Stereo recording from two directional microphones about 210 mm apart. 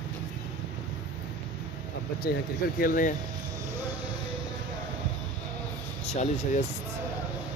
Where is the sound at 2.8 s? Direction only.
40° left (ahead or behind).